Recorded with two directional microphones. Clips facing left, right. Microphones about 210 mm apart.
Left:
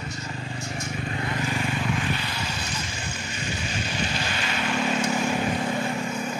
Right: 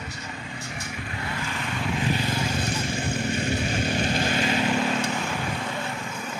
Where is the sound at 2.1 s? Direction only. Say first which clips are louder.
Right 5 dB; 45° right (ahead or behind).